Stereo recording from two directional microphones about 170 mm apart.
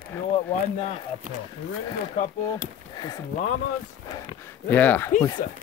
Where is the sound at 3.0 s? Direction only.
20° left (ahead or behind).